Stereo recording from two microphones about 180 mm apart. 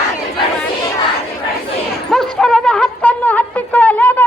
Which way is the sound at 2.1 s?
5° left (ahead or behind).